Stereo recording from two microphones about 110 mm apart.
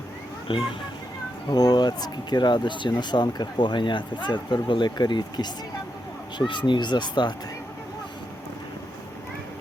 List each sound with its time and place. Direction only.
0.5 s speech: 50° left (ahead or behind)
1.5 s speech: 40° left (ahead or behind)